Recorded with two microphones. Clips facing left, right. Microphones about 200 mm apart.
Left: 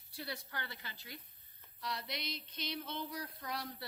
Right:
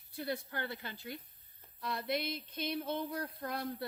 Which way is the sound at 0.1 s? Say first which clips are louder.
Right 7 dB; 50° right (ahead or behind).